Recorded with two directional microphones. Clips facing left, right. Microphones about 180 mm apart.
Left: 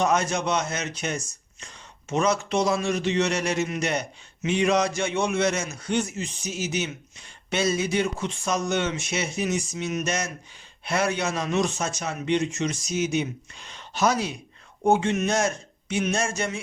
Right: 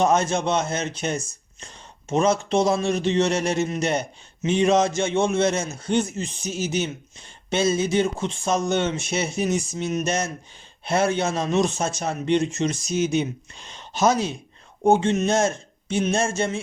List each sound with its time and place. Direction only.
0.0 s speech: 25° right (ahead or behind)